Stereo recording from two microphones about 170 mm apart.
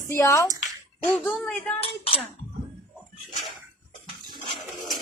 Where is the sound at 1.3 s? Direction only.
5° left (ahead or behind).